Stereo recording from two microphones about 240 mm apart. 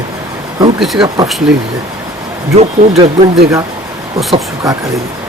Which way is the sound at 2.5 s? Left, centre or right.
Right.